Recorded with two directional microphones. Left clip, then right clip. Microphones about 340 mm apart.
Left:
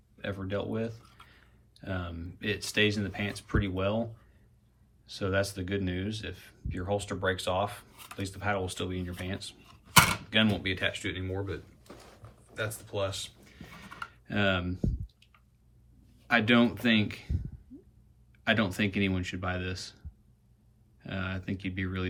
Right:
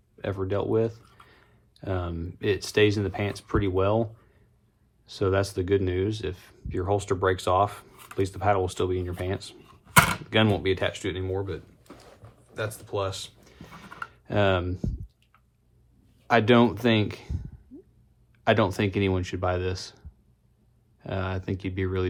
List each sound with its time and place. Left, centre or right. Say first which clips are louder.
0.2 s speech: right 6 dB; centre
5.1 s speech: right 5 dB; centre
12.5 s a sound: right 3 dB; centre
16.2 s speech: right 5 dB; centre
18.6 s speech: right 5 dB; centre
21.0 s speech: right 5 dB; centre